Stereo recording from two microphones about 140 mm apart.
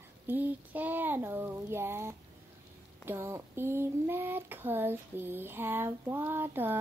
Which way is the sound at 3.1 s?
20° right (ahead or behind).